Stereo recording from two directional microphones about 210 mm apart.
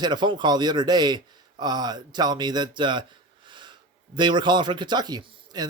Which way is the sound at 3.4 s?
20° right (ahead or behind).